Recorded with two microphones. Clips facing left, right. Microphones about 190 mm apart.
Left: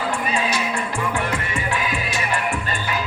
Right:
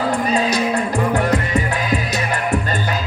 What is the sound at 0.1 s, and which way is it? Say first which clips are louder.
Music: right 5 dB; 40° right (ahead or behind).